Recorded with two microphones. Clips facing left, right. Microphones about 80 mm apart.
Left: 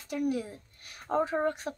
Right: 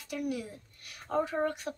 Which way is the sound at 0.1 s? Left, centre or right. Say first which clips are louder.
Left 4 dB; left.